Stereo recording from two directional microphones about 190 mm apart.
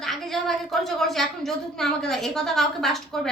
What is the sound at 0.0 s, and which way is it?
A woman's voice, centre (ahead or behind).